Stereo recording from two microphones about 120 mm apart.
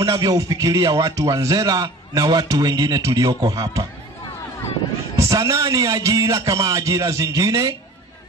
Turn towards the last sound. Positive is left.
turn(degrees=-30)  # may be behind; listen again after turning